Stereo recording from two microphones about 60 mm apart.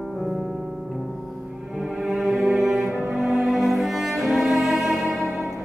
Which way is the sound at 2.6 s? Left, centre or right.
Centre.